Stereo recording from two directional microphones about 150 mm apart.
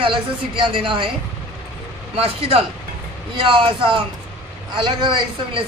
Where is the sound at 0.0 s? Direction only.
35° right (ahead or behind).